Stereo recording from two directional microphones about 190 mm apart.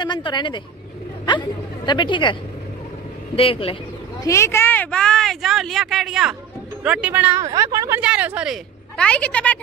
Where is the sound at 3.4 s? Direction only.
30° left (ahead or behind).